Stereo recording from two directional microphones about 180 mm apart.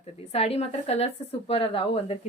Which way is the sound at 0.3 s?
35° left (ahead or behind).